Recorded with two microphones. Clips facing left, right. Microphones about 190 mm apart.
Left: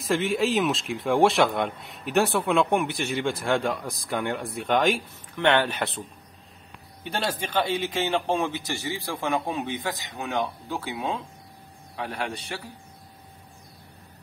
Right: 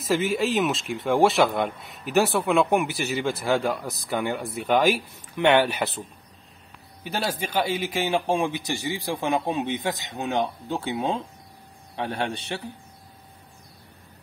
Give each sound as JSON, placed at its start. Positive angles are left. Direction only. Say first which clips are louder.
{"t": 0.0, "sound": "a man's voice", "louder": "right 1 dB", "side_deg": 0}